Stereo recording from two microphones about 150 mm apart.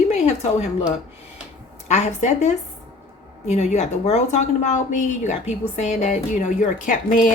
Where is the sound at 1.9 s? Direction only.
50° left (ahead or behind).